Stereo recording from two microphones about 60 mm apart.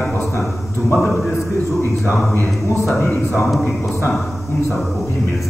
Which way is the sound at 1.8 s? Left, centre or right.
Left.